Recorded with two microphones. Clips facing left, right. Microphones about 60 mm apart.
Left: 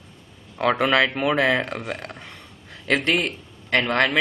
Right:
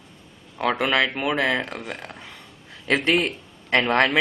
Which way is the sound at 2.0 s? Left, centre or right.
Centre.